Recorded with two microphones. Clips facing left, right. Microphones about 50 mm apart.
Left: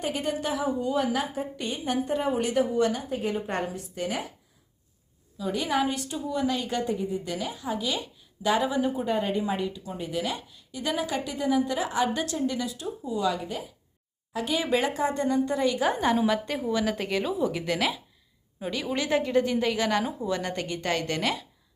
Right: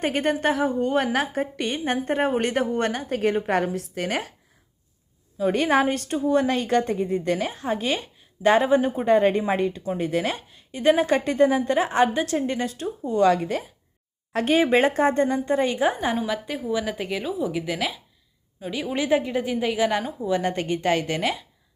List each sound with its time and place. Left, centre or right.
0.0 s a woman's voice: right
1.8 s a woman's voice: right
5.4 s a woman's voice: right
9.1 s a woman's voice: right
10.3 s a woman's voice: right
11.8 s a woman's voice: right
13.1 s speech: right
14.3 s a woman's voice: right
14.6 s a woman's voice: right
15.9 s a woman's voice: centre
18.7 s a woman's voice: centre